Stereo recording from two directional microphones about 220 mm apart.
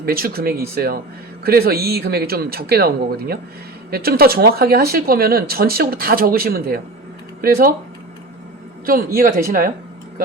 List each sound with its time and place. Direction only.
0.0 s speech: 45° right (ahead or behind)
8.9 s speech: 40° right (ahead or behind)